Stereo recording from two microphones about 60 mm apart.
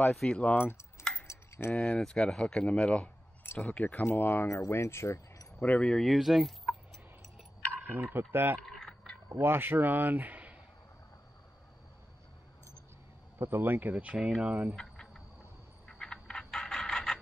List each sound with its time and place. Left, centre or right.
0.0 s speech: centre
0.3 s speech: left
1.2 s cutlery: left
1.7 s speech: centre; by 4.6 s left
4.6 s speech: left
5.6 s speech: left
6.0 s speech: centre
7.9 s speech: right
8.6 s a sound: centre
9.4 s speech: right
13.4 s speech: right
14.1 s speech: centre
14.8 s a sound: centre